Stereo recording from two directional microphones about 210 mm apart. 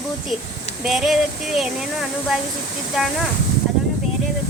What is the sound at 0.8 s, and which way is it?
Speech, centre (ahead or behind).